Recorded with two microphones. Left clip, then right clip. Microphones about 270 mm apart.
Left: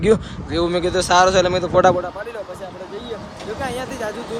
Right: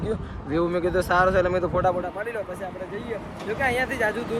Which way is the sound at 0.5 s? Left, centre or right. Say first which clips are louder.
Left 4 dB; centre.